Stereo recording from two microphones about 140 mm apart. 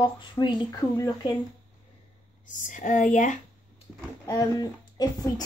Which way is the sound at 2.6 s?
65° left (ahead or behind).